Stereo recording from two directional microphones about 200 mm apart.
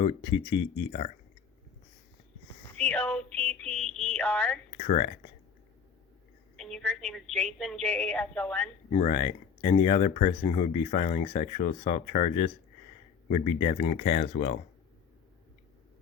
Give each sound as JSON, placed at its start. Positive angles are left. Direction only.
{"t": 0.0, "sound": "speech", "side_deg": 25}
{"t": 2.7, "sound": "a woman's voice", "side_deg": 5}
{"t": 4.8, "sound": "speech", "side_deg": 30}
{"t": 6.6, "sound": "a woman's voice", "side_deg": 0}
{"t": 9.0, "sound": "speech", "side_deg": 30}